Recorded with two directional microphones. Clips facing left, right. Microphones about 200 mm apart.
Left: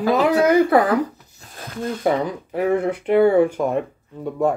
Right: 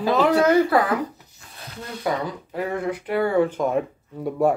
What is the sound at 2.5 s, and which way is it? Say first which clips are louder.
Speech: left 7 dB; 20° left (ahead or behind).